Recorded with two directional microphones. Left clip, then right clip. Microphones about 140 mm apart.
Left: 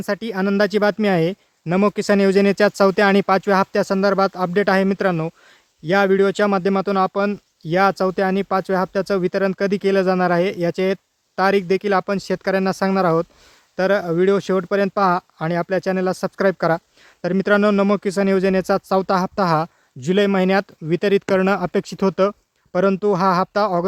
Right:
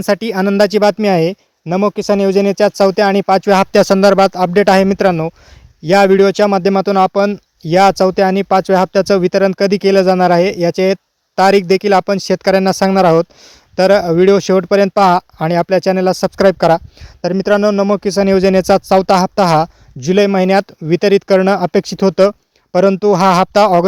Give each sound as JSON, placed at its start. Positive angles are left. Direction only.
{"t": 0.0, "sound": "speech", "side_deg": -60}
{"t": 1.6, "sound": "speech", "side_deg": -20}
{"t": 3.5, "sound": "speech", "side_deg": -55}
{"t": 17.2, "sound": "speech", "side_deg": -25}
{"t": 17.9, "sound": "speech", "side_deg": -35}